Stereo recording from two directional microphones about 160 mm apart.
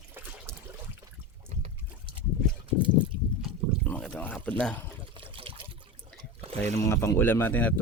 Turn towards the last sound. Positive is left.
turn(degrees=10)  # may be behind; listen again after turning